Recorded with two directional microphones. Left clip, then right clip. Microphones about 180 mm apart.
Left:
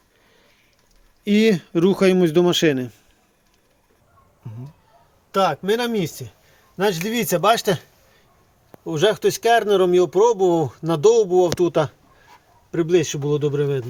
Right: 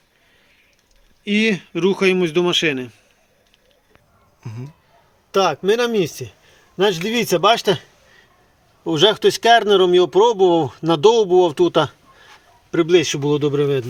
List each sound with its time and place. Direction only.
1.2 s speech: 55° left (ahead or behind)
5.3 s speech: 35° right (ahead or behind)
8.8 s speech: 25° right (ahead or behind)